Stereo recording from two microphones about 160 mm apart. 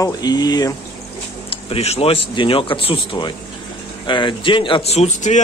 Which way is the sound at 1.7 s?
40° left (ahead or behind).